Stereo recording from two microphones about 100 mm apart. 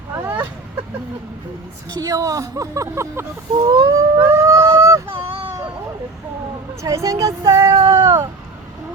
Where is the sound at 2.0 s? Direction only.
35° right (ahead or behind).